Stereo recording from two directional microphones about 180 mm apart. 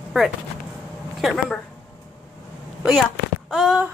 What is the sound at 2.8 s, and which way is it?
Speech, centre (ahead or behind).